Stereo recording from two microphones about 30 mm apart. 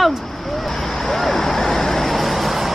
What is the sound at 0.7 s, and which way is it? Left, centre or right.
Vehicle, centre.